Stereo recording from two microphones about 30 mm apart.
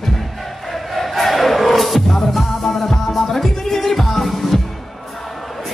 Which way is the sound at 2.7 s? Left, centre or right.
Centre.